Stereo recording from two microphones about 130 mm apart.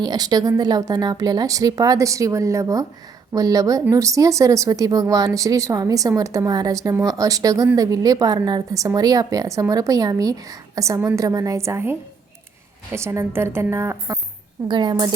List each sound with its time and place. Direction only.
0.0 s speech: 30° right (ahead or behind)
14.7 s a woman's voice: 35° right (ahead or behind)